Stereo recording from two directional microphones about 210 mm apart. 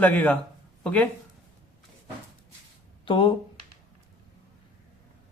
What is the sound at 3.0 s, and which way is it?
Speech, 25° left (ahead or behind).